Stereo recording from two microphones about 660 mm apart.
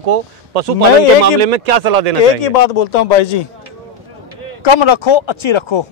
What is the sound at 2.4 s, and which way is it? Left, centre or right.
A man's voice, left.